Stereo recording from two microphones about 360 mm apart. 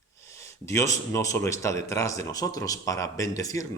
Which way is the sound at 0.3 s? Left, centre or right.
Centre.